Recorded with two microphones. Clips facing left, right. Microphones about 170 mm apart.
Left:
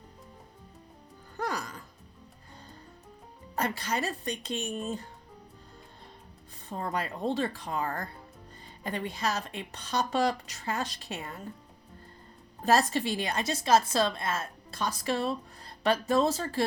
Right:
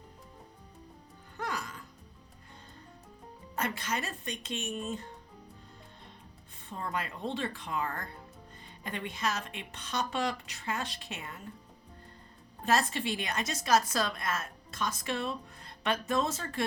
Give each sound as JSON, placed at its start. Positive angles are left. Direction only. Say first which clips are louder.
{"t": 1.4, "sound": "music", "louder": "left 4 dB", "side_deg": 35}
{"t": 3.5, "sound": "a woman's voice", "louder": "left 3 dB", "side_deg": 35}
{"t": 6.7, "sound": "a woman's voice", "louder": "left 4 dB", "side_deg": 40}
{"t": 12.6, "sound": "a woman's voice", "louder": "left 4 dB", "side_deg": 35}